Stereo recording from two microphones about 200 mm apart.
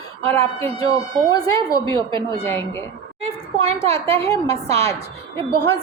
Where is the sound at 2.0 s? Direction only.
25° right (ahead or behind).